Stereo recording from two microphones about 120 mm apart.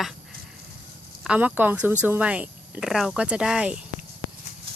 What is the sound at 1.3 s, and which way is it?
Speech, 10° right (ahead or behind).